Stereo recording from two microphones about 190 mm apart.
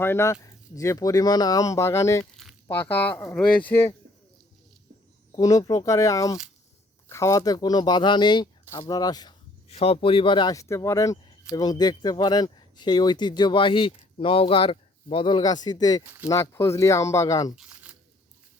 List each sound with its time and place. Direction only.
0.0 s speech: 15° left (ahead or behind)
2.3 s a sound: centre (ahead or behind)
2.6 s speech: 10° left (ahead or behind)
5.3 s speech: 20° left (ahead or behind)
9.6 s speech: 30° left (ahead or behind)
17.5 s a sound: 5° right (ahead or behind)